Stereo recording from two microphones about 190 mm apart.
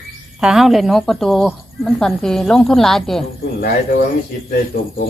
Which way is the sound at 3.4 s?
55° left (ahead or behind).